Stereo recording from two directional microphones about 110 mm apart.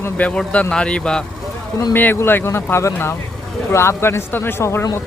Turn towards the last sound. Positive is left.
turn(degrees=25)  # may be behind; listen again after turning